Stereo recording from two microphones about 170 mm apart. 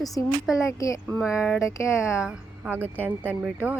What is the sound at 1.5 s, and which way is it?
Speech, 15° left (ahead or behind).